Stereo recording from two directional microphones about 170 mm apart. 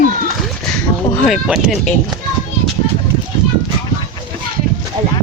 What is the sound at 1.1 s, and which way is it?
Goat, 5° left (ahead or behind).